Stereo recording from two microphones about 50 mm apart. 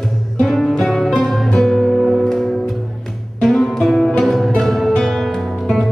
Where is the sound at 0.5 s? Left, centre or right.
Centre.